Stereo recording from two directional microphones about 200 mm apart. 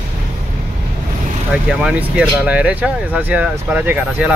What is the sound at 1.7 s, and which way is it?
Speech, 5° right (ahead or behind).